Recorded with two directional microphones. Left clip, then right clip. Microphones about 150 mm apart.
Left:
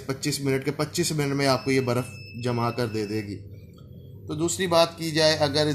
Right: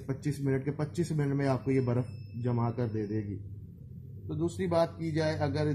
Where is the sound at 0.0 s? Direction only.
20° left (ahead or behind).